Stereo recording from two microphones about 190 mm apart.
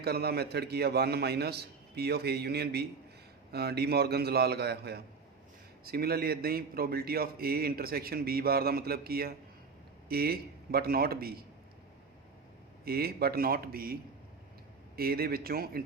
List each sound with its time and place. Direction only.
0.0 s a man's voice: 55° right (ahead or behind)
12.8 s a man's voice: 55° right (ahead or behind)